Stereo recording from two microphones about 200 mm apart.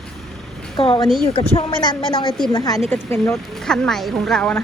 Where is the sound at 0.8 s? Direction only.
25° left (ahead or behind).